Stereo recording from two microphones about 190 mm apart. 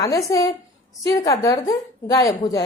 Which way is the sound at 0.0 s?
15° left (ahead or behind).